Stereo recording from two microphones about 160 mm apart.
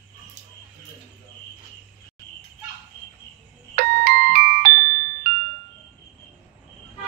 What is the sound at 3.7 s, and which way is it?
Music, 65° right (ahead or behind).